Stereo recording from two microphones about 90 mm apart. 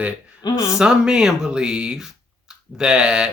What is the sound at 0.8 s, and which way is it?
Speech, 10° right (ahead or behind).